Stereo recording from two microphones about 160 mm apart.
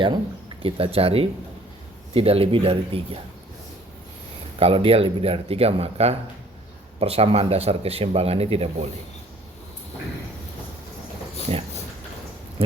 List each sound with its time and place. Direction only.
0.6 s speech: 35° right (ahead or behind)
4.6 s speech: 35° right (ahead or behind)
11.5 s speech: 35° right (ahead or behind)
12.6 s a sound: 35° right (ahead or behind)